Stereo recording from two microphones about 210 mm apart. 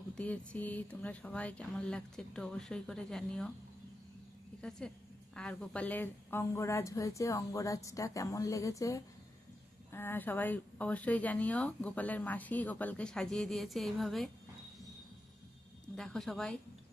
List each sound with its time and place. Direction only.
0.1 s speech: 5° left (ahead or behind)
4.6 s a woman's voice: 5° left (ahead or behind)
16.0 s speech: centre (ahead or behind)